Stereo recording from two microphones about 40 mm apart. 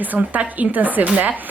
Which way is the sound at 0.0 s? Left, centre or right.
Right.